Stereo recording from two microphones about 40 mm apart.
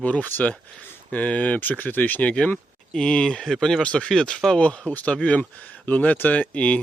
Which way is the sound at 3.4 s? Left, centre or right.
Centre.